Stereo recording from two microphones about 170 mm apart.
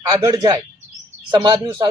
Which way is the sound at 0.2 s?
20° right (ahead or behind).